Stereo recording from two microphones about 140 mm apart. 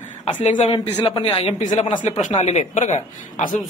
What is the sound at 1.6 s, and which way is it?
A woman's voice, 60° left (ahead or behind).